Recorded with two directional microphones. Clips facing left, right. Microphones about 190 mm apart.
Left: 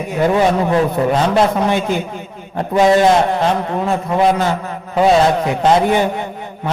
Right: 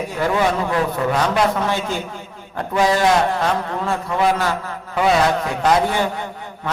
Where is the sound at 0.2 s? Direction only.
25° left (ahead or behind).